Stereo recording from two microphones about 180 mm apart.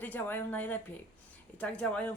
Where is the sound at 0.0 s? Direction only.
10° left (ahead or behind).